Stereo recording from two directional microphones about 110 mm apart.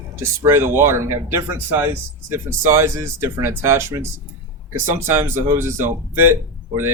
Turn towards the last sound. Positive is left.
turn(degrees=-20)  # may be behind; listen again after turning